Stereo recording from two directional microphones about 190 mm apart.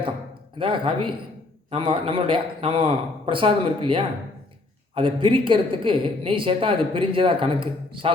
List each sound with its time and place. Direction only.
0.6 s speech: 25° right (ahead or behind)